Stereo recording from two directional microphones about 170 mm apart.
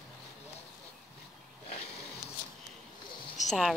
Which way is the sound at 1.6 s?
35° left (ahead or behind).